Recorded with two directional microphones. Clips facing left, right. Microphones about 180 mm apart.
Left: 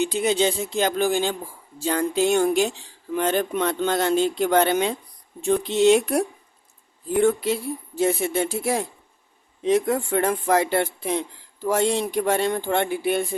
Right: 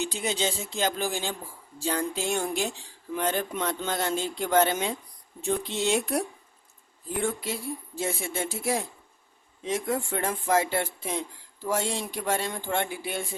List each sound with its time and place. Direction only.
0.0 s speech: 60° left (ahead or behind)